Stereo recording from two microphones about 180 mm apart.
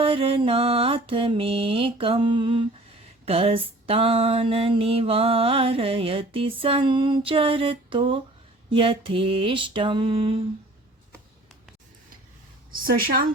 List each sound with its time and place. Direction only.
0.0 s mantra: 30° right (ahead or behind)
3.2 s a sound: 30° right (ahead or behind)
8.7 s mantra: 30° right (ahead or behind)
12.8 s a woman's voice: 55° right (ahead or behind)